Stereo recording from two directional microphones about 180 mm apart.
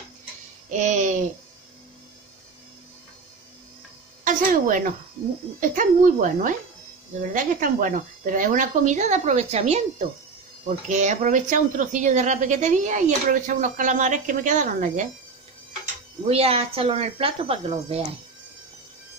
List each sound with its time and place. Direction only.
0.7 s a sound: 40° right (ahead or behind)
4.2 s a woman's voice: 45° right (ahead or behind)
16.3 s speech: 35° right (ahead or behind)